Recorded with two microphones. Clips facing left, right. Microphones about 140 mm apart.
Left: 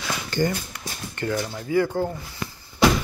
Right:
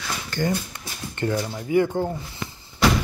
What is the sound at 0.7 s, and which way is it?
Speech, 25° right (ahead or behind).